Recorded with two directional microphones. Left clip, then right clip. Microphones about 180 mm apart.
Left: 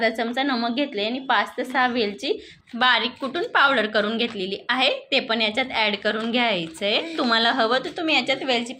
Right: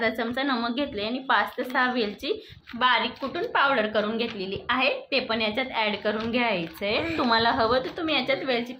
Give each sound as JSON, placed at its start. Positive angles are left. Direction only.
{"t": 0.0, "sound": "a woman's voice", "side_deg": 15}
{"t": 2.7, "sound": "a woman's voice", "side_deg": 30}